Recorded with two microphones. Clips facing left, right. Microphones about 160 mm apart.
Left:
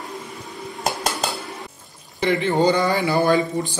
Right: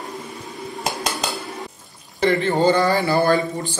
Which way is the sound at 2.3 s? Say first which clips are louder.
Right 1 dB; 20° left (ahead or behind).